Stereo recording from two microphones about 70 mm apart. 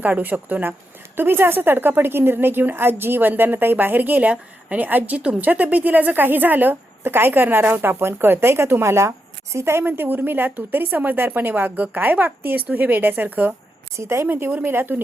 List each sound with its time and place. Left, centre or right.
0.0 s a woman's voice: right
9.8 s a woman's voice: right
13.9 s a woman's voice: right
14.3 s a woman's voice: right